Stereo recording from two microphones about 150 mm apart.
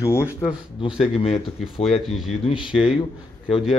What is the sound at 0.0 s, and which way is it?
Speech, 15° left (ahead or behind).